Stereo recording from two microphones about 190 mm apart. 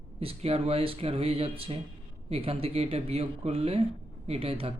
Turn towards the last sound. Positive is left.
turn(degrees=-30)  # may be behind; listen again after turning